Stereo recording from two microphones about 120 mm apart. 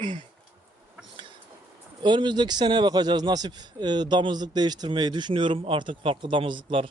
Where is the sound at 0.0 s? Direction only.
40° right (ahead or behind).